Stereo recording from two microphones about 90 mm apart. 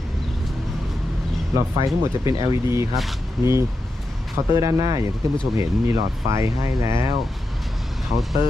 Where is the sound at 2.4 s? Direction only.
40° right (ahead or behind).